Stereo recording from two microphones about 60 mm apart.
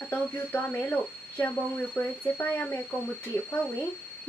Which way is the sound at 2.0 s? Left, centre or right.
Left.